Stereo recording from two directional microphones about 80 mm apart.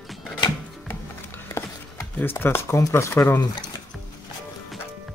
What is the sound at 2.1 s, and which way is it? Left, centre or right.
Speech, left.